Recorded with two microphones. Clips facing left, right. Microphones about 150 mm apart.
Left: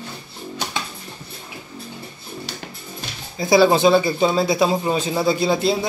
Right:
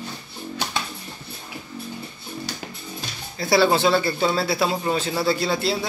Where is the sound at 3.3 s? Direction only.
15° left (ahead or behind).